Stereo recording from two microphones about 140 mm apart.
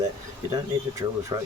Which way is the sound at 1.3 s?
25° right (ahead or behind).